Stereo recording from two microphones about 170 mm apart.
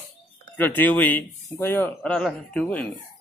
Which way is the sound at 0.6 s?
10° left (ahead or behind).